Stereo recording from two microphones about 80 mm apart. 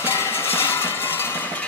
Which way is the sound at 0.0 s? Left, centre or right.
Left.